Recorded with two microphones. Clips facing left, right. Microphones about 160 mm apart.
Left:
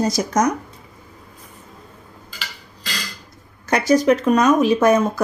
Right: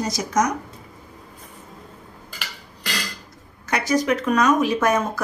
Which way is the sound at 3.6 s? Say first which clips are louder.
Left 6 dB; 35° left (ahead or behind).